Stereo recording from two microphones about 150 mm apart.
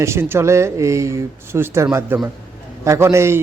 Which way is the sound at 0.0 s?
15° right (ahead or behind).